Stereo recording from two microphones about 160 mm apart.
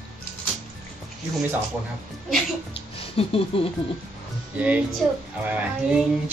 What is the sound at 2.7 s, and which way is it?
Music, 35° left (ahead or behind).